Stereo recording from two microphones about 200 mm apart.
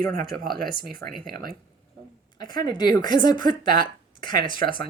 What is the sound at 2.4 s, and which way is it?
A woman's voice, 20° left (ahead or behind).